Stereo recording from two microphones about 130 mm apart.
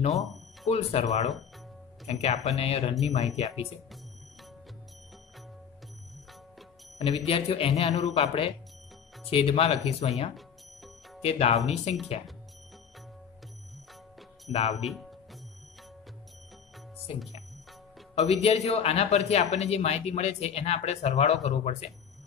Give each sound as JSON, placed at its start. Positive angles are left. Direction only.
{"t": 0.1, "sound": "speech", "side_deg": 0}
{"t": 0.7, "sound": "a man's voice", "side_deg": 60}
{"t": 7.1, "sound": "speech", "side_deg": 50}
{"t": 10.3, "sound": "music", "side_deg": 0}
{"t": 11.2, "sound": "a man's voice", "side_deg": 55}
{"t": 14.5, "sound": "a man's voice", "side_deg": 55}
{"t": 14.8, "sound": "speech", "side_deg": 0}
{"t": 18.1, "sound": "a man's voice", "side_deg": 55}